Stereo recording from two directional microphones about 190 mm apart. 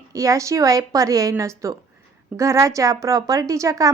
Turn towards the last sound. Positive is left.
turn(degrees=-15)  # may be behind; listen again after turning